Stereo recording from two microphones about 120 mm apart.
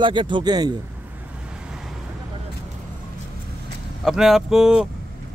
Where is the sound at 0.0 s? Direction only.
40° right (ahead or behind).